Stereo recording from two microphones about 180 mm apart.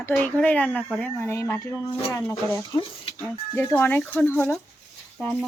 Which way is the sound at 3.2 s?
10° left (ahead or behind).